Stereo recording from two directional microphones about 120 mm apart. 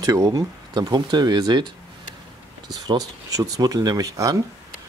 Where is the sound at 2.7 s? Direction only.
30° right (ahead or behind).